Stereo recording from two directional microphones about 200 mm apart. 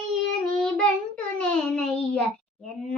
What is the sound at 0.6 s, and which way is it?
Child singing, 5° left (ahead or behind).